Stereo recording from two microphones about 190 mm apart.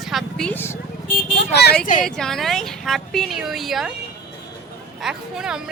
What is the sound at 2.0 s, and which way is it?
Speech, centre (ahead or behind).